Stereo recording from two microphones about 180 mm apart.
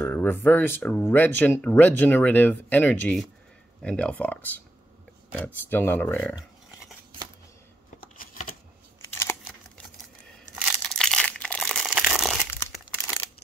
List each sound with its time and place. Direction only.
0.0 s speech: 10° left (ahead or behind)
8.0 s a sound: 50° left (ahead or behind)
10.9 s crumpling: 5° left (ahead or behind)